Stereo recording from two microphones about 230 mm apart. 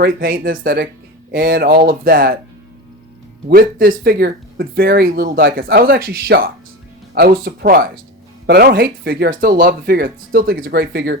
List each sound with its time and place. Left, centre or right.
0.0 s speech: right
3.5 s speech: right